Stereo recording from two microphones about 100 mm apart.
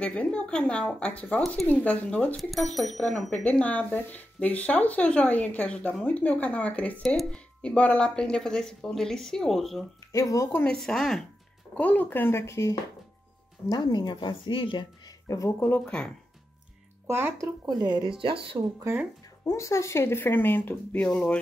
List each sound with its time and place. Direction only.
0.0 s speech: 10° left (ahead or behind)
2.3 s a woman's voice: centre (ahead or behind)
10.1 s speech: 35° left (ahead or behind)
10.8 s a woman's voice: 5° left (ahead or behind)
11.7 s speech: 15° left (ahead or behind)
13.7 s speech: 45° left (ahead or behind)
15.0 s speech: 30° left (ahead or behind)
15.7 s speech: 10° left (ahead or behind)
17.1 s speech: 20° right (ahead or behind)
17.6 s speech: 45° right (ahead or behind)
18.2 s speech: 60° right (ahead or behind)
19.4 s speech: 30° left (ahead or behind); by 21.4 s 10° left (ahead or behind)